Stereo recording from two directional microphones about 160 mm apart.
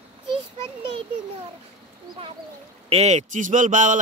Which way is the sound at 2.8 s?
40° right (ahead or behind).